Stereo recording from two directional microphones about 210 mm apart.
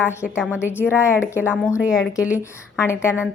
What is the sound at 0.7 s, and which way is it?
Speech, 10° left (ahead or behind).